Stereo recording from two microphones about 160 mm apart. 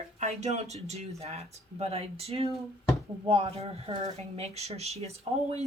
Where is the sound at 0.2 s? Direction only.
45° right (ahead or behind).